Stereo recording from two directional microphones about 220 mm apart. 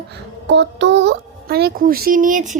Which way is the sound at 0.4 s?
50° right (ahead or behind).